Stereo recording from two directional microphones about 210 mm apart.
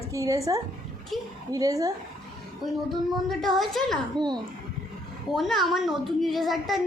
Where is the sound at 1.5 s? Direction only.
15° right (ahead or behind).